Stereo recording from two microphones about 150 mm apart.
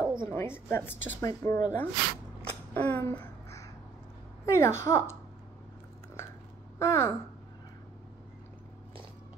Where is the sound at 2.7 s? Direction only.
15° left (ahead or behind).